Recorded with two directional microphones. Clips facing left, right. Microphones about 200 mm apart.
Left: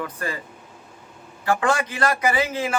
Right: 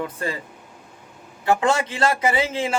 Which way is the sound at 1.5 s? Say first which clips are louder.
Right 2 dB; 25° right (ahead or behind).